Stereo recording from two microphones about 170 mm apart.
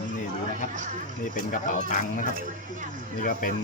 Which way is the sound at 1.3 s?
50° left (ahead or behind).